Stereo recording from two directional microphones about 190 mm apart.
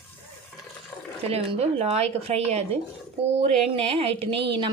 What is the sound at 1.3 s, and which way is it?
A woman's voice, 35° right (ahead or behind).